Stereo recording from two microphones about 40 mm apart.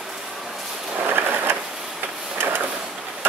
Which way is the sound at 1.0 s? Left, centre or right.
Right.